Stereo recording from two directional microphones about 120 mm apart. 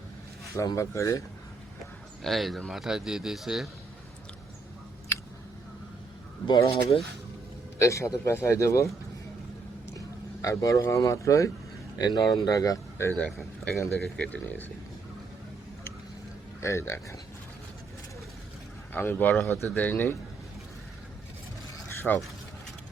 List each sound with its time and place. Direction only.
0.5 s speech: 25° left (ahead or behind)
2.2 s speech: centre (ahead or behind)
5.1 s a sound: 20° left (ahead or behind)
6.5 s speech: 45° left (ahead or behind)
7.8 s speech: 25° left (ahead or behind)
10.4 s speech: 25° left (ahead or behind)
13.1 s speech: 5° left (ahead or behind)
16.6 s speech: 25° left (ahead or behind)
18.9 s speech: 15° left (ahead or behind)
22.1 s speech: 10° left (ahead or behind)